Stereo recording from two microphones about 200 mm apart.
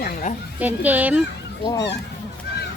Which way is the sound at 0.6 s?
10° right (ahead or behind).